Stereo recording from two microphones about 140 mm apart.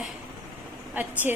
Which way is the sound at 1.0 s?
10° right (ahead or behind).